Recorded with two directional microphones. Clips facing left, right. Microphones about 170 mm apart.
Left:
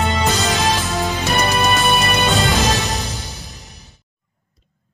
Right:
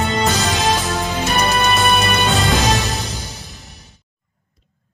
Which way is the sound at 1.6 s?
Centre (ahead or behind).